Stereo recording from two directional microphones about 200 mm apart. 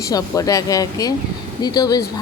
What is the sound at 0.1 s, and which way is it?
Speech, 15° left (ahead or behind).